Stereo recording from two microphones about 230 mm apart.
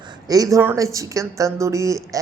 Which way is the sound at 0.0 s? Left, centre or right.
Centre.